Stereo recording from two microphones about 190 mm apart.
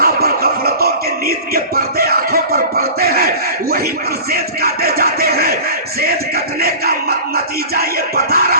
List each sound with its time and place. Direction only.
0.0 s music: 55° right (ahead or behind)